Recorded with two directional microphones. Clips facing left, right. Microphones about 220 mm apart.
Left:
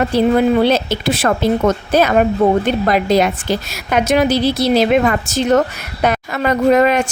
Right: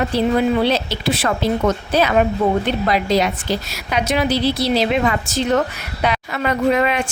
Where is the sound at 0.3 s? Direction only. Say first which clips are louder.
Left 3 dB; 50° left (ahead or behind).